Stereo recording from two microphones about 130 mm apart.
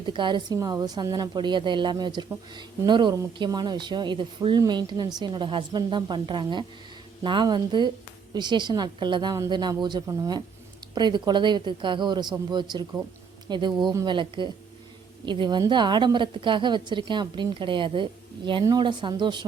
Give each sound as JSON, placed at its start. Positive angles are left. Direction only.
{"t": 0.0, "sound": "a woman's voice", "side_deg": -40}